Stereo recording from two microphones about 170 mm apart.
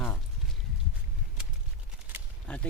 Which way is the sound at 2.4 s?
5° left (ahead or behind).